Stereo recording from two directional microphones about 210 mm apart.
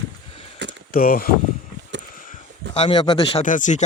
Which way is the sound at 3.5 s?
35° left (ahead or behind).